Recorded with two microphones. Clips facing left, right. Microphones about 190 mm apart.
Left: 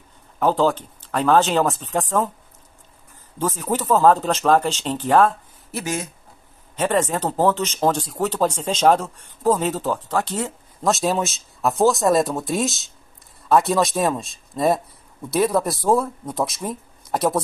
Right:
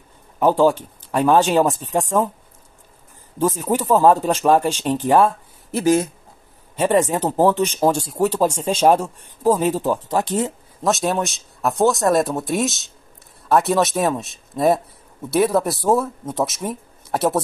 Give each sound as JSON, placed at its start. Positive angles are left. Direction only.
{"t": 0.4, "sound": "speech", "side_deg": -15}
{"t": 3.3, "sound": "speech", "side_deg": -15}
{"t": 5.8, "sound": "speech", "side_deg": -30}
{"t": 6.8, "sound": "speech", "side_deg": -15}
{"t": 10.8, "sound": "speech", "side_deg": 0}
{"t": 15.2, "sound": "speech", "side_deg": -5}